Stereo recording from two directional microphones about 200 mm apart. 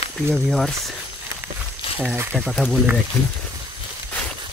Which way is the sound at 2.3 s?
5° left (ahead or behind).